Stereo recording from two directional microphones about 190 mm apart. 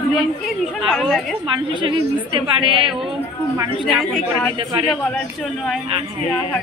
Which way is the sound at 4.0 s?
Centre (ahead or behind).